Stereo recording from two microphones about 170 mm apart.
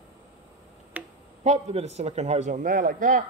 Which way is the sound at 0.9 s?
10° right (ahead or behind).